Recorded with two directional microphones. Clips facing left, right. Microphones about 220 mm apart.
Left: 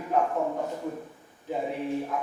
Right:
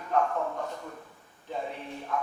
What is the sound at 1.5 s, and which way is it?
Speech, 10° left (ahead or behind).